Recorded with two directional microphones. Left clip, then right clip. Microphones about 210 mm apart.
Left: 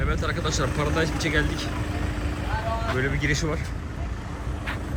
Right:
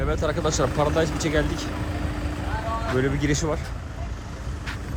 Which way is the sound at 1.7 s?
40° right (ahead or behind).